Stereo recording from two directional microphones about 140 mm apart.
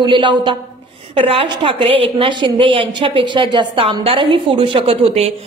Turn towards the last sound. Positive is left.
turn(degrees=-45)  # may be behind; listen again after turning